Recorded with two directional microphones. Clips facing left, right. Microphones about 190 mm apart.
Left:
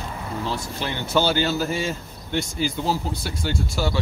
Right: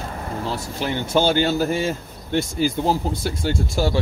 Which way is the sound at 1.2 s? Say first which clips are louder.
Right 3 dB; 50° right (ahead or behind).